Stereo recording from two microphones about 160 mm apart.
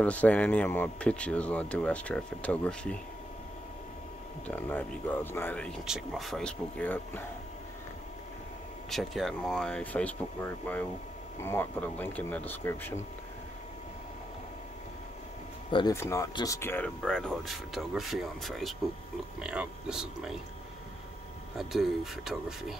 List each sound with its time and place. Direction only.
0.0 s speech: 10° left (ahead or behind)
4.5 s speech: 10° left (ahead or behind)
8.9 s speech: centre (ahead or behind)
15.9 s speech: 15° left (ahead or behind); by 20.3 s 5° right (ahead or behind)
21.5 s speech: centre (ahead or behind)